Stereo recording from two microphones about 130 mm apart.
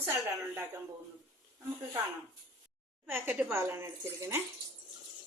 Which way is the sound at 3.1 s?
15° right (ahead or behind).